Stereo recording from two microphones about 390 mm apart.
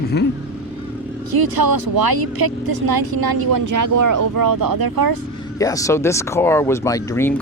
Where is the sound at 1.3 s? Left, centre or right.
Right.